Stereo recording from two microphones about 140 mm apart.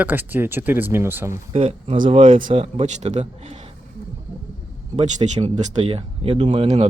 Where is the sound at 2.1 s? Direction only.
35° right (ahead or behind).